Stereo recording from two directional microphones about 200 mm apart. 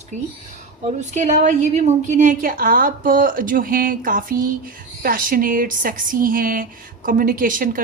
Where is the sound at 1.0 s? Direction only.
35° right (ahead or behind).